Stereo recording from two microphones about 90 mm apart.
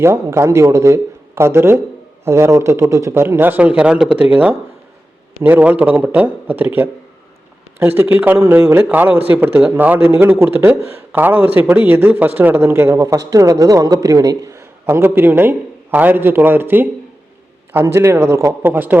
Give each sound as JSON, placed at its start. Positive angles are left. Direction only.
{"t": 0.0, "sound": "speech", "side_deg": -30}